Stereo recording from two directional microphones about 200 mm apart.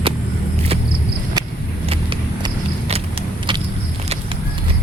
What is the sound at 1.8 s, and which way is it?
Vehicle, 30° right (ahead or behind).